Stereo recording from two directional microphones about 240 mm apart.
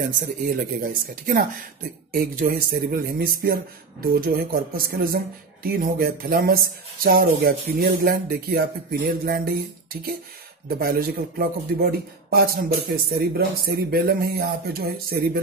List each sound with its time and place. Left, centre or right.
0.5 s speech: right
10.8 s speech: right